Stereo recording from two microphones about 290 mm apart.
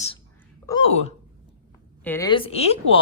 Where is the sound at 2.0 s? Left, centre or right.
Centre.